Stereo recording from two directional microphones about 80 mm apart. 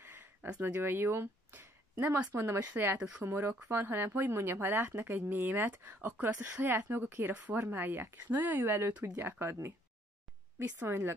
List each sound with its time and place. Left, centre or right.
0.0 s a sound: right
0.5 s speech: right
10.8 s speech: right